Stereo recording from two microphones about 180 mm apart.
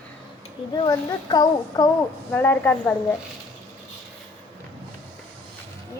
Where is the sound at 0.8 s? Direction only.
25° left (ahead or behind).